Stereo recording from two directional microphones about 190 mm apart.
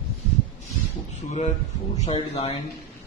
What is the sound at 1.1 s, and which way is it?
A man's voice, 35° left (ahead or behind).